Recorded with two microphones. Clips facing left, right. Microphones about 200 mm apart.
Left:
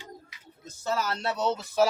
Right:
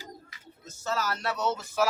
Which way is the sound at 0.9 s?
25° left (ahead or behind).